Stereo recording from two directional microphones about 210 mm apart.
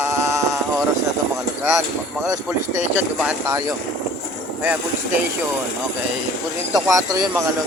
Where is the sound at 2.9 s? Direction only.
5° right (ahead or behind).